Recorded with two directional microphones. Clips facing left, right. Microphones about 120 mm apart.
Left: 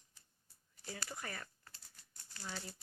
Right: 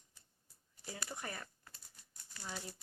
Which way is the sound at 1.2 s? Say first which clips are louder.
Right 1 dB; 25° right (ahead or behind).